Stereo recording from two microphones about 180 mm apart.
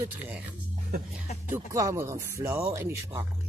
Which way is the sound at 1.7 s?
15° right (ahead or behind).